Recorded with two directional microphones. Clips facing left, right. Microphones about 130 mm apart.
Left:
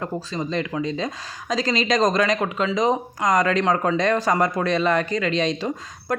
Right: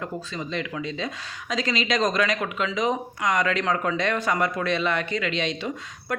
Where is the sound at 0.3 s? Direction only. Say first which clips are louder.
Left 6 dB; 40° left (ahead or behind).